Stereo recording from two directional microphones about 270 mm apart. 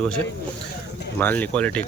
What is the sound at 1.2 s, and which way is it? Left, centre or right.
Speech, centre.